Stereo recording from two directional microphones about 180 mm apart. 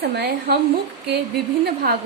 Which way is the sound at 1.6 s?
60° right (ahead or behind).